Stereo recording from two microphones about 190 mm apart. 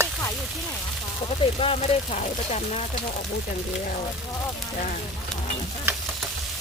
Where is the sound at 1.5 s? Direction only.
30° left (ahead or behind).